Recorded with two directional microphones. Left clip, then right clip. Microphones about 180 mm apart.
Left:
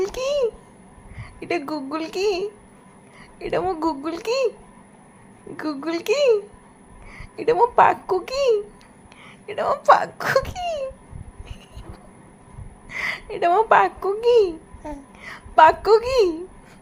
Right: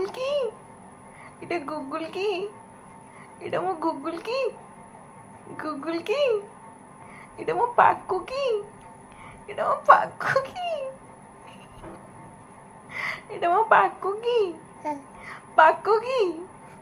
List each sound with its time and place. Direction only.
0.0 s a sound: 40° left (ahead or behind)
1.4 s speech: 40° left (ahead or behind)
5.5 s speech: 40° left (ahead or behind)
12.9 s a woman's voice: 40° left (ahead or behind)
14.8 s babbling: 15° left (ahead or behind)
15.2 s a woman's voice: 40° left (ahead or behind)